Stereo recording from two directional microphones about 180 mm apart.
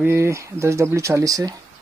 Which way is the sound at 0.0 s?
15° right (ahead or behind).